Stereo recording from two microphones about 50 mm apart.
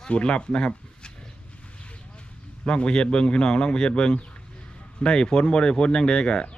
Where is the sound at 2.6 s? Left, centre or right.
Centre.